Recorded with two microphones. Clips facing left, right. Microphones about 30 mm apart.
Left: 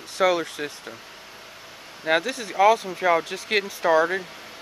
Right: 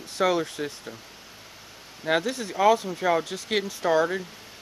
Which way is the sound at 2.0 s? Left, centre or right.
Centre.